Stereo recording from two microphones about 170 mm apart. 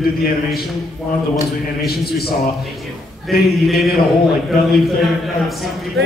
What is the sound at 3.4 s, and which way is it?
A man's voice, centre (ahead or behind).